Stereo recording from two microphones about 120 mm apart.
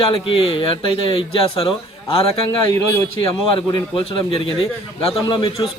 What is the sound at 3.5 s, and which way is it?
Speech, 45° left (ahead or behind).